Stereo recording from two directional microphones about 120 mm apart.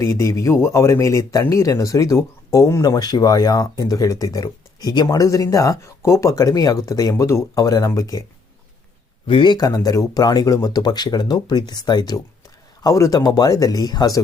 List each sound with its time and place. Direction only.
0.0 s speech: 25° left (ahead or behind)
9.2 s speech: 45° left (ahead or behind)